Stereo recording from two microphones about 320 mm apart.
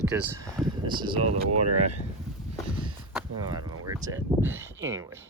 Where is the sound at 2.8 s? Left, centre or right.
Centre.